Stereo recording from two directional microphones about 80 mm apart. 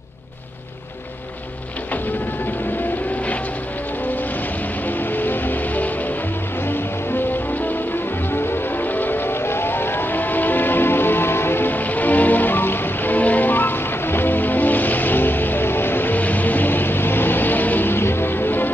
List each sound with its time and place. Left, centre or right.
5.1 s music: left
8.3 s vehicle: left